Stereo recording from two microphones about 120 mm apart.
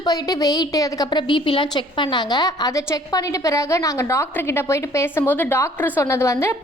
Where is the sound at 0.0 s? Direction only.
30° left (ahead or behind).